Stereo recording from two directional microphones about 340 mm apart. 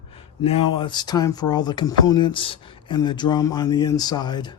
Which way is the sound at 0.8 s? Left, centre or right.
Centre.